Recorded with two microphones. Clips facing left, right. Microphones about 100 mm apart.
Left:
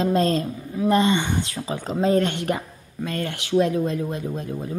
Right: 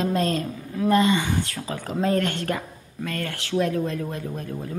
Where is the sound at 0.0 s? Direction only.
30° left (ahead or behind).